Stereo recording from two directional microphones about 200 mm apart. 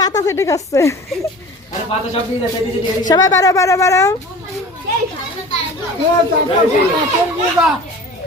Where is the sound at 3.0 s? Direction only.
20° left (ahead or behind).